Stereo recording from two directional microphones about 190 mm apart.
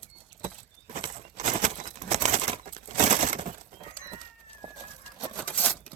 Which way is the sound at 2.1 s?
35° right (ahead or behind).